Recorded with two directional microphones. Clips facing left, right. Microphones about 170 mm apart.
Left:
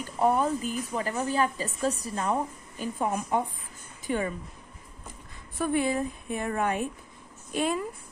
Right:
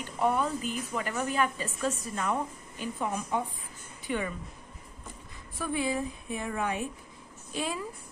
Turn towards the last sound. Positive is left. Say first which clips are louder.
# left 6 dB
turn(degrees=55)  # may be behind; listen again after turning